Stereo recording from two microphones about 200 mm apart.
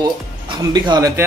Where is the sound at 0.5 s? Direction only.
20° right (ahead or behind).